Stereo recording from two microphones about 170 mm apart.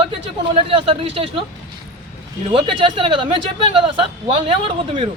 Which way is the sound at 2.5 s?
30° right (ahead or behind).